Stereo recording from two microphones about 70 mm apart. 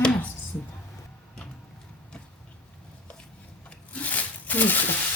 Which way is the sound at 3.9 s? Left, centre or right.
Left.